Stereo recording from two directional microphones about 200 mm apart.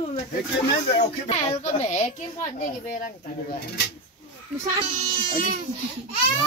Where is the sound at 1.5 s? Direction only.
35° left (ahead or behind).